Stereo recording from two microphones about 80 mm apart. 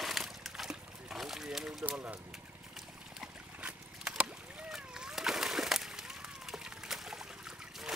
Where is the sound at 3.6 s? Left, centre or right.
Centre.